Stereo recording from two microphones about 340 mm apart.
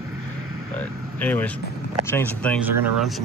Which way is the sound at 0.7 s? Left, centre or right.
Centre.